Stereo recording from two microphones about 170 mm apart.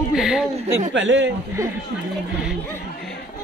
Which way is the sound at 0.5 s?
40° right (ahead or behind).